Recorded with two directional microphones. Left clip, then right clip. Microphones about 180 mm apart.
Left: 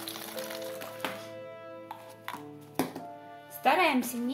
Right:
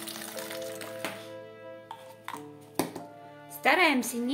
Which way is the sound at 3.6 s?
35° right (ahead or behind).